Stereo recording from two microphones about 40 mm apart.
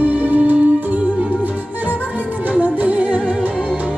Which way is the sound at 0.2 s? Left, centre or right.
Right.